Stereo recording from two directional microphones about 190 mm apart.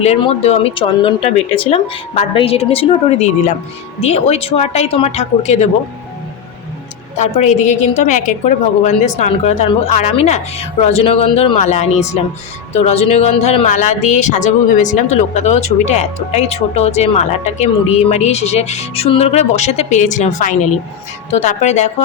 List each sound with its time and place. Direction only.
0.0 s speech: 35° left (ahead or behind)
7.2 s speech: 40° left (ahead or behind)